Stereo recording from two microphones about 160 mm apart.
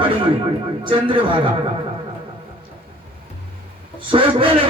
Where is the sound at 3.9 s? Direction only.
30° right (ahead or behind).